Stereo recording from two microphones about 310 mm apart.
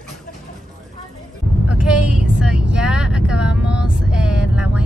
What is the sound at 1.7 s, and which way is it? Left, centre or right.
Speech, centre.